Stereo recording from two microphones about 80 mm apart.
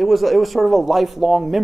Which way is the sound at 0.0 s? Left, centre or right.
Centre.